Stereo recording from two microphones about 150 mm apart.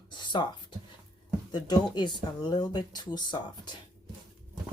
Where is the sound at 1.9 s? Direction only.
30° left (ahead or behind).